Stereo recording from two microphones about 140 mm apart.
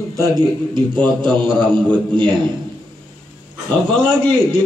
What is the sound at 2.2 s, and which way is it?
Speech, 35° right (ahead or behind).